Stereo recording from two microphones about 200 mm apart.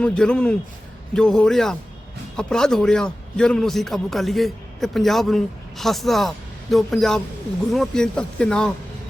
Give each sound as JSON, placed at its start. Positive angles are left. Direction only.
{"t": 0.0, "sound": "a man's voice", "side_deg": 5}